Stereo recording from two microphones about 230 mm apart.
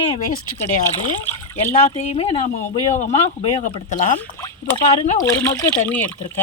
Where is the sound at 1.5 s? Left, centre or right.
Left.